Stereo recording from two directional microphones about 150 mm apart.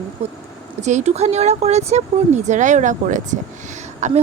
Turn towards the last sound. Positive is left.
turn(degrees=-50)  # may be behind; listen again after turning